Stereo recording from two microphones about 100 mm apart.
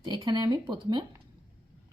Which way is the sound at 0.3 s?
45° right (ahead or behind).